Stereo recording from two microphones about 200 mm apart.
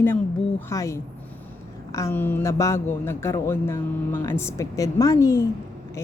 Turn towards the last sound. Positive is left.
turn(degrees=15)  # may be behind; listen again after turning